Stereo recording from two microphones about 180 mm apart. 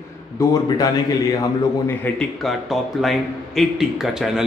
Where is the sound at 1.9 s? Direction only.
5° left (ahead or behind).